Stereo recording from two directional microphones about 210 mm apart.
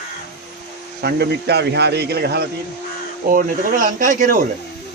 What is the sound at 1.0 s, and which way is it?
A man's voice, 50° right (ahead or behind).